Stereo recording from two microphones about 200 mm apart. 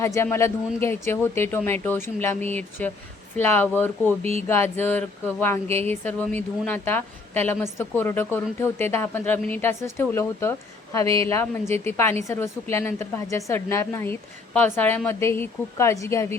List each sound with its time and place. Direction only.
0.0 s a woman's voice: 15° left (ahead or behind)
4.2 s speech: 30° right (ahead or behind)
4.4 s a woman's voice: 10° left (ahead or behind)
11.7 s a woman's voice: 10° left (ahead or behind)